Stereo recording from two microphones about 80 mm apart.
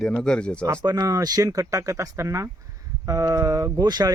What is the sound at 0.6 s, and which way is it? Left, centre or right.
Speech, right.